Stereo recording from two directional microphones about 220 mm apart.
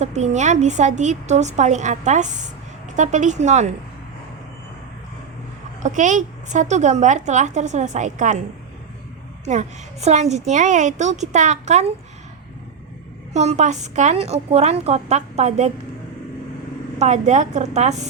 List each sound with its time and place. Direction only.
0.0 s a woman's voice: 30° right (ahead or behind)
5.8 s a woman's voice: 35° right (ahead or behind)
9.4 s a woman's voice: 30° right (ahead or behind)
13.3 s a woman's voice: 30° right (ahead or behind)
17.0 s a woman's voice: 30° right (ahead or behind)